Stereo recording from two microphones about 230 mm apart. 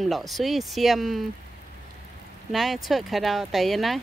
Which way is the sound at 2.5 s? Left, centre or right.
Centre.